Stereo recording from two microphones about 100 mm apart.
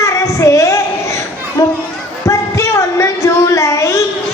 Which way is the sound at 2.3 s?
30° left (ahead or behind).